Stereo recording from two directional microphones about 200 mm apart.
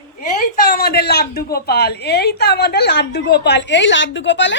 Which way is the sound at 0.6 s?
45° left (ahead or behind).